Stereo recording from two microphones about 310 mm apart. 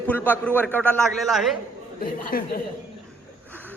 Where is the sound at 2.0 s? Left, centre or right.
Left.